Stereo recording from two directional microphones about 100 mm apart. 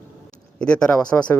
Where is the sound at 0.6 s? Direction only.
10° left (ahead or behind).